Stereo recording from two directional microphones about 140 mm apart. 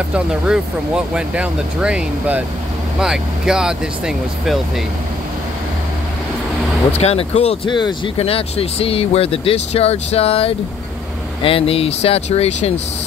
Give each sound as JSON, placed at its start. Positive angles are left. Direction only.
{"t": 0.1, "sound": "speech", "side_deg": -5}
{"t": 6.9, "sound": "speech", "side_deg": 50}
{"t": 7.7, "sound": "speech", "side_deg": 35}
{"t": 8.2, "sound": "speech", "side_deg": 45}